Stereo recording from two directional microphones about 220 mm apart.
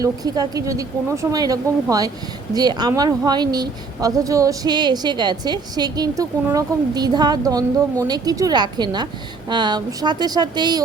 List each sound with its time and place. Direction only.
0.0 s speech: 15° right (ahead or behind)